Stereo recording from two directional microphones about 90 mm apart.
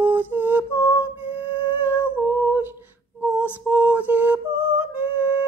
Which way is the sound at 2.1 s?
15° right (ahead or behind).